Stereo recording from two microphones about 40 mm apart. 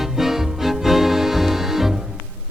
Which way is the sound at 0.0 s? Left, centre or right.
Centre.